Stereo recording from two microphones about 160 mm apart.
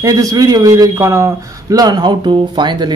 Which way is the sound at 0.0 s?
20° right (ahead or behind).